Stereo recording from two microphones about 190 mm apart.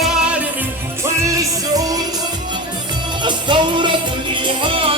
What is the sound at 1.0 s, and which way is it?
Music, 15° right (ahead or behind).